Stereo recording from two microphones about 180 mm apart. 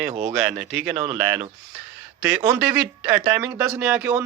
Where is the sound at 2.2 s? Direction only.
10° right (ahead or behind).